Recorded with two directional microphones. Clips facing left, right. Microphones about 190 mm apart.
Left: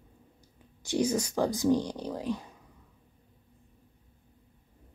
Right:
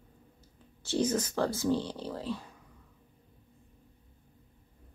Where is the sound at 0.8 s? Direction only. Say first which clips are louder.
Left 1 dB; 15° left (ahead or behind).